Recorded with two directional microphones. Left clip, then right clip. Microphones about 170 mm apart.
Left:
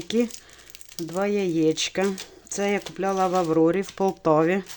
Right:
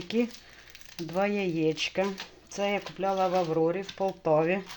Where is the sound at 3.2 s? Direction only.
60° left (ahead or behind); by 4.6 s 45° left (ahead or behind).